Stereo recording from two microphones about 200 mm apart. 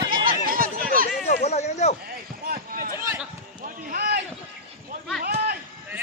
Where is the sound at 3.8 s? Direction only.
50° right (ahead or behind).